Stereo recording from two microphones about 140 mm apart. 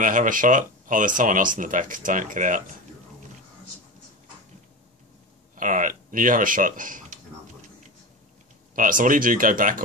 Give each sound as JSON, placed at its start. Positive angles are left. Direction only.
{"t": 0.0, "sound": "speech", "side_deg": -70}
{"t": 5.6, "sound": "speech", "side_deg": -70}
{"t": 8.7, "sound": "speech", "side_deg": -75}